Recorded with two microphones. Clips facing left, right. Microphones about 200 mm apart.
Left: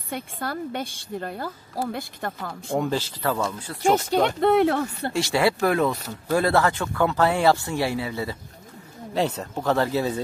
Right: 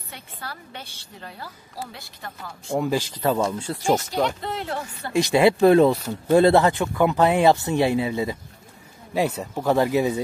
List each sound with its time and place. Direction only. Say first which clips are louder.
0.1 s a woman's voice: left 9 dB; 50° left (ahead or behind)
2.9 s speech: right 3 dB; 15° right (ahead or behind)
4.0 s speech: left 4 dB; 60° left (ahead or behind)
5.1 s speech: right 5 dB; 20° right (ahead or behind)
9.1 s speech: right 1 dB; 10° right (ahead or behind)